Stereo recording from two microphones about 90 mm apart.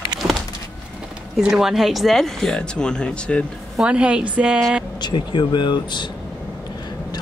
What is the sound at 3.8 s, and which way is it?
Speech, 10° right (ahead or behind).